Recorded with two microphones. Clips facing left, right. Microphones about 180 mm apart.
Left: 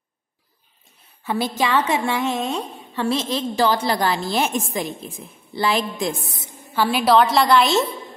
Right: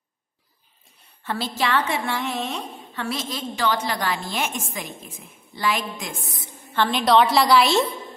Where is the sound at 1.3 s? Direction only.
15° left (ahead or behind); by 6.5 s 30° left (ahead or behind).